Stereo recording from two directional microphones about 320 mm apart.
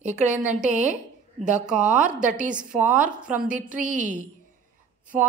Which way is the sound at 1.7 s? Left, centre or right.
Centre.